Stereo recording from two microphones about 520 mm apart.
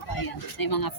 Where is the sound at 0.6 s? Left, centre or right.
Left.